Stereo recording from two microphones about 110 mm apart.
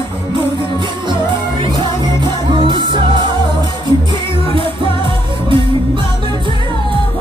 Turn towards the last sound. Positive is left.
turn(degrees=-45)  # may be behind; listen again after turning